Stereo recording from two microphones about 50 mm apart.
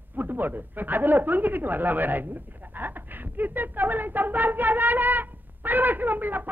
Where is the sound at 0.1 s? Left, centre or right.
Right.